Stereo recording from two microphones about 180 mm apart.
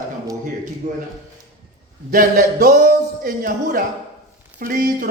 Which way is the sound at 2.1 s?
55° right (ahead or behind).